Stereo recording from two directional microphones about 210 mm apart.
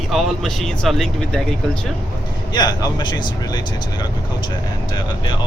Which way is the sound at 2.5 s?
20° left (ahead or behind).